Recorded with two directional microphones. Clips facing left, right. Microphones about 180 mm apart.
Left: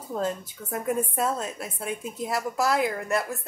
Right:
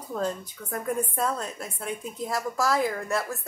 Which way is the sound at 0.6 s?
10° left (ahead or behind).